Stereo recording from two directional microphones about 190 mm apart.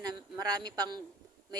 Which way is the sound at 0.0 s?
20° right (ahead or behind).